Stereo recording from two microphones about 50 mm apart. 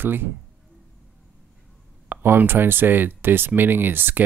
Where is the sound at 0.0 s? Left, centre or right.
Right.